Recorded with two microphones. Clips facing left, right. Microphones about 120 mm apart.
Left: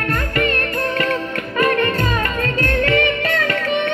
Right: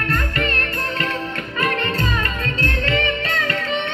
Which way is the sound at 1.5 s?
45° left (ahead or behind).